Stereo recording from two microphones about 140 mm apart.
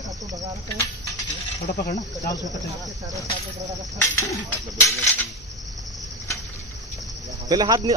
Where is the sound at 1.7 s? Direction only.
90° left.